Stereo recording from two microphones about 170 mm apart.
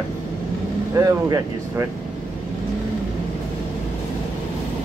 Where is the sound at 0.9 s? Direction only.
20° right (ahead or behind).